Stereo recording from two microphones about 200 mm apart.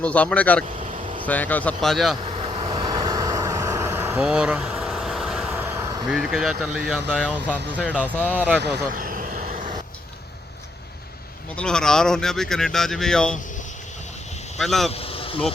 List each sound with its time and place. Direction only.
0.0 s speech: 5° left (ahead or behind)
2.2 s vehicle: 30° right (ahead or behind); by 5.8 s 10° right (ahead or behind)
5.8 s vehicle: 20° right (ahead or behind)
6.1 s speech: centre (ahead or behind)
9.0 s vehicle: 45° right (ahead or behind)
11.5 s speech: 5° left (ahead or behind)
14.6 s speech: centre (ahead or behind)
14.8 s vehicle: 30° left (ahead or behind)